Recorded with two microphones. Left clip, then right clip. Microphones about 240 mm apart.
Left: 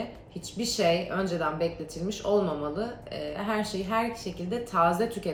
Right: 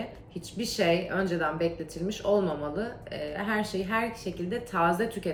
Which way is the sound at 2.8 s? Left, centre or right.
Centre.